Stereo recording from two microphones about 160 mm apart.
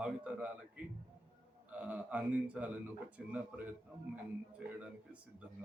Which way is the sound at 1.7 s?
10° right (ahead or behind).